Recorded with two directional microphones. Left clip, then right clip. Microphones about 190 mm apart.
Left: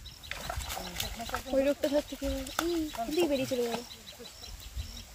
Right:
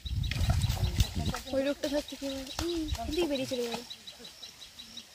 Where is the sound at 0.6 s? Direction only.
15° left (ahead or behind).